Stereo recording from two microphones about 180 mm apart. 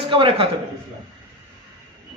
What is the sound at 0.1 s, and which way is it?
Speech, 30° right (ahead or behind).